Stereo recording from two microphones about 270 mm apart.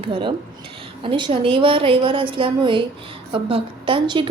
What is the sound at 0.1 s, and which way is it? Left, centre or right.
A woman's voice, centre.